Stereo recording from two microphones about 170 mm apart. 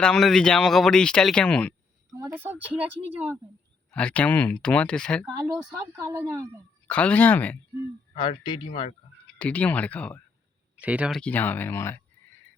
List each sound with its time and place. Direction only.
0.0 s speech: centre (ahead or behind)
2.1 s speech: 15° right (ahead or behind)
3.9 s speech: 5° left (ahead or behind)
6.0 s speech: 20° right (ahead or behind)
6.8 s speech: 10° left (ahead or behind)
8.2 s speech: 25° left (ahead or behind)
9.4 s speech: 10° left (ahead or behind)
10.8 s speech: 10° right (ahead or behind)
11.2 s speech: 10° left (ahead or behind)